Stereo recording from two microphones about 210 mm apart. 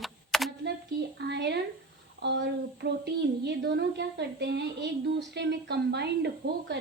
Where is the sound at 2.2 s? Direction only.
55° right (ahead or behind).